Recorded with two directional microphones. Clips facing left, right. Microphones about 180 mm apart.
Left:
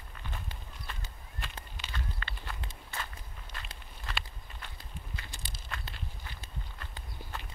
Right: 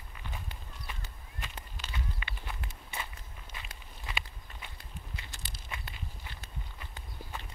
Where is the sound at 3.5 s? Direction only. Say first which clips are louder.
Left 1 dB; 10° right (ahead or behind).